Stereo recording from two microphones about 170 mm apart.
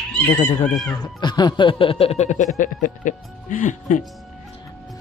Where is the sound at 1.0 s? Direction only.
25° left (ahead or behind); by 4.0 s 50° left (ahead or behind).